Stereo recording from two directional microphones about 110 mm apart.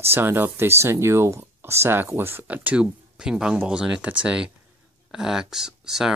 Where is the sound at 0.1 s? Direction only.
20° right (ahead or behind).